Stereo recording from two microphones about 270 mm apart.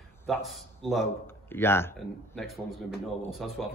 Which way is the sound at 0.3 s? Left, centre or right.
Centre.